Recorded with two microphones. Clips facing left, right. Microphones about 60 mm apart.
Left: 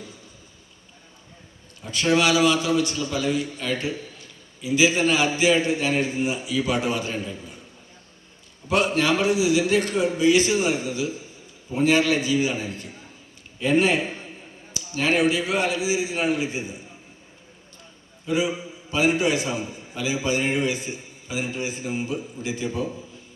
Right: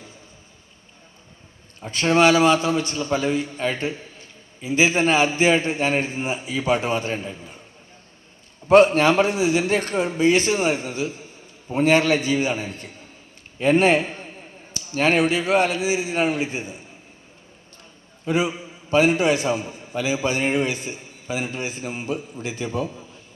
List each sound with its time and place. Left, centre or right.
1.8 s a man's voice: right
8.6 s a man's voice: right
18.3 s a man's voice: right